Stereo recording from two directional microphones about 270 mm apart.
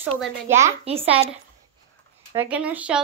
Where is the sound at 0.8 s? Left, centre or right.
Right.